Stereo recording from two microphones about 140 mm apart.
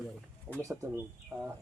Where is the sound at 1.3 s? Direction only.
5° right (ahead or behind).